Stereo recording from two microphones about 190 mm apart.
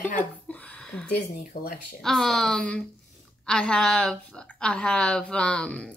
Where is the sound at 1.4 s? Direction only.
45° left (ahead or behind).